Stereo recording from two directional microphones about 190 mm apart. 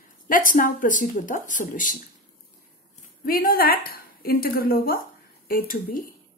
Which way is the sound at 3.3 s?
50° left (ahead or behind).